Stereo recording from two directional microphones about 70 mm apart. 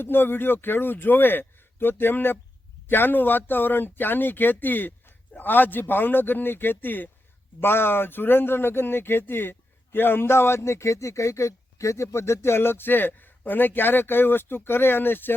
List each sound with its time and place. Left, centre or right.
0.0 s speech: left